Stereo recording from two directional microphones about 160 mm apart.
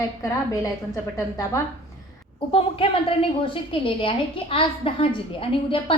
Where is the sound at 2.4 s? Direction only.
35° left (ahead or behind).